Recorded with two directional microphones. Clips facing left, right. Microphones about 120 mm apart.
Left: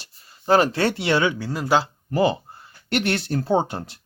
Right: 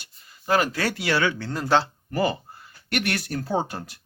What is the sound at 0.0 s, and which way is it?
Speech, 30° left (ahead or behind).